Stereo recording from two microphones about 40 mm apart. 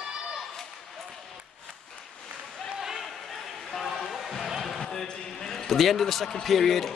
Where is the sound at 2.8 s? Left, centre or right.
Centre.